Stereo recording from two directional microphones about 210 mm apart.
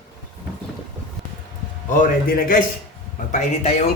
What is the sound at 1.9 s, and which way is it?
Speech, 40° left (ahead or behind).